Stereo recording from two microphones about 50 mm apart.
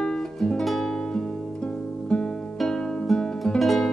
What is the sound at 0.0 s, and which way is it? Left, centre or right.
Music, centre.